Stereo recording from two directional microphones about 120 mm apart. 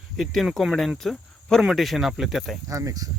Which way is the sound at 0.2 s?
Centre (ahead or behind).